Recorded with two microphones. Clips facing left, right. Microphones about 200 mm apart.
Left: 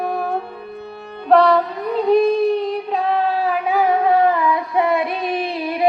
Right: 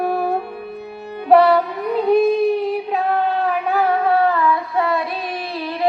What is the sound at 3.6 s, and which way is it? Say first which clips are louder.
Child singing: left 3 dB; 10° left (ahead or behind).